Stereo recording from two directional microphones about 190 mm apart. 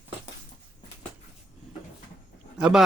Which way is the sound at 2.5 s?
Centre (ahead or behind).